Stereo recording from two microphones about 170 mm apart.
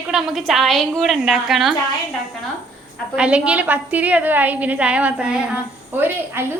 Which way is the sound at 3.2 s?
5° right (ahead or behind).